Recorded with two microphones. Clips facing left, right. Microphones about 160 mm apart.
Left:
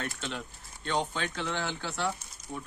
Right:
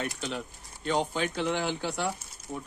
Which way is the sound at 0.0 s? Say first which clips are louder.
Right 3 dB; 15° right (ahead or behind).